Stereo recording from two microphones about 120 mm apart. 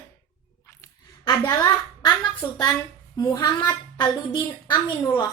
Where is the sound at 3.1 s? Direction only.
30° left (ahead or behind).